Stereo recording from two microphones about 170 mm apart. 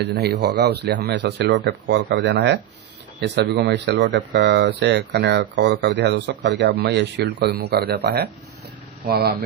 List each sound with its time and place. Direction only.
0.0 s speech: 75° right (ahead or behind)